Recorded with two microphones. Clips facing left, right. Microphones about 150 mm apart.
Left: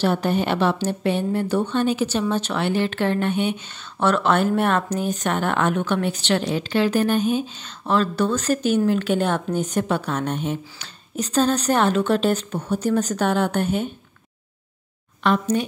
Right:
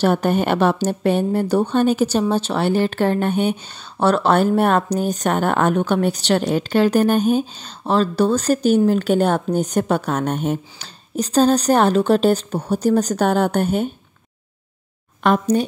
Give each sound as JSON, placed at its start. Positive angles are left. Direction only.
{"t": 0.0, "sound": "a woman's voice", "side_deg": -50}
{"t": 15.2, "sound": "a woman's voice", "side_deg": -40}